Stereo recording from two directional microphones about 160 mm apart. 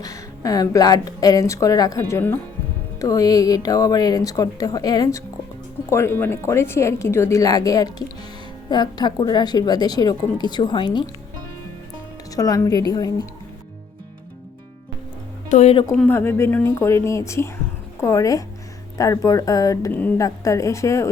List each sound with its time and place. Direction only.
0.0 s a woman's voice: 20° left (ahead or behind)
12.4 s a woman's voice: 20° left (ahead or behind)
15.4 s speech: 45° left (ahead or behind)
16.0 s a woman's voice: 15° left (ahead or behind)
20.0 s a woman's voice: 10° left (ahead or behind)